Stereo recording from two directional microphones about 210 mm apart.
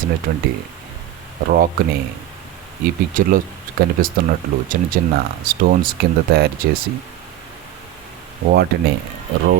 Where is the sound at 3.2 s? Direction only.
40° right (ahead or behind).